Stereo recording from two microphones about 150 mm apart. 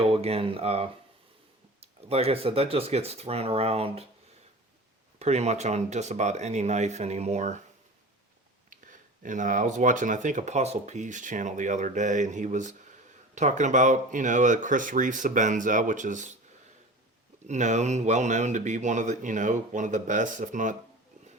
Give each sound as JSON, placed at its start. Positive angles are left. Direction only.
{"t": 0.0, "sound": "speech", "side_deg": -40}
{"t": 5.2, "sound": "speech", "side_deg": -45}
{"t": 8.7, "sound": "speech", "side_deg": -60}
{"t": 17.4, "sound": "speech", "side_deg": -55}